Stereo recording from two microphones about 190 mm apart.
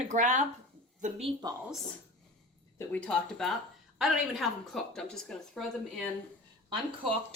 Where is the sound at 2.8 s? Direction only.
5° left (ahead or behind).